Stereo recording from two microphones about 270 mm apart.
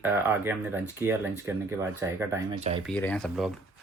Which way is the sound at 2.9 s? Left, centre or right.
Centre.